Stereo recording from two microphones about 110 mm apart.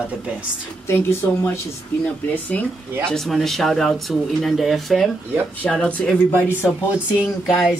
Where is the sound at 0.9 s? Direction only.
25° left (ahead or behind).